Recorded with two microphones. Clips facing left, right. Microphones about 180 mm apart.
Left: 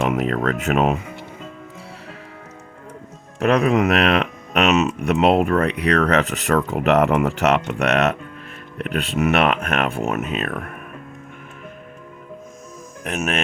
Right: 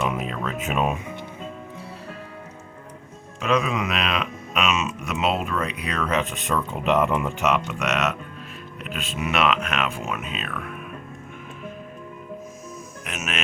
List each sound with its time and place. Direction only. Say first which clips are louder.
0.0 s speech: left 7 dB; 70° left (ahead or behind)
3.4 s speech: left 7 dB; 60° left (ahead or behind)
13.1 s speech: left 8 dB; 55° left (ahead or behind)